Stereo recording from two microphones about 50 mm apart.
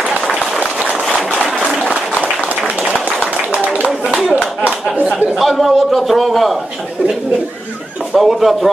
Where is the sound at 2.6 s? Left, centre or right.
Right.